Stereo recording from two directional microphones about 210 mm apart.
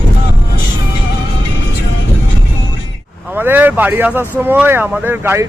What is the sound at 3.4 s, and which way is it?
Speech, 10° right (ahead or behind).